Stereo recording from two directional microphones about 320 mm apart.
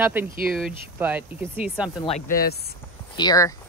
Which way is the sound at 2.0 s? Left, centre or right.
Left.